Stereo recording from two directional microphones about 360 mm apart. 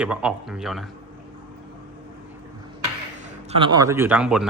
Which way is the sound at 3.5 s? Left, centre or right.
Centre.